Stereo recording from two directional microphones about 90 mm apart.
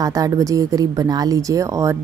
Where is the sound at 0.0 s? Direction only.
40° right (ahead or behind).